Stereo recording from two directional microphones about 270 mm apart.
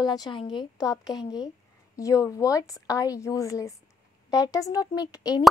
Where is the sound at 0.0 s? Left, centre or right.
Centre.